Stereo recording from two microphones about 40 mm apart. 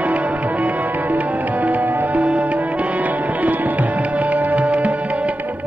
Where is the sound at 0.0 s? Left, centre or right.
Right.